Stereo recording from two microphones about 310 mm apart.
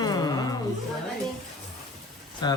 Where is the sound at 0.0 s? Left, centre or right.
Centre.